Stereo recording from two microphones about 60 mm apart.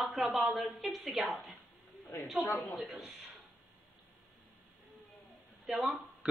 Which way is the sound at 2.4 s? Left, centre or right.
Left.